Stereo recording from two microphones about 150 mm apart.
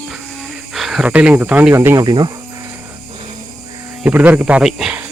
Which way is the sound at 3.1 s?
40° right (ahead or behind).